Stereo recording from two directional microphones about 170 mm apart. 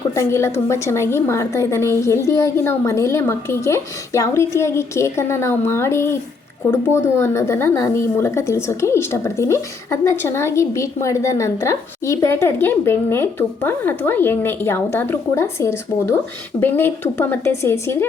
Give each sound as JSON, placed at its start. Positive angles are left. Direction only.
{"t": 0.2, "sound": "a woman's voice", "side_deg": 15}